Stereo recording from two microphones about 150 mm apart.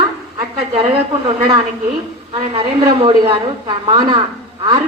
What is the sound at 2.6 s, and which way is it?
A man's voice, 40° right (ahead or behind).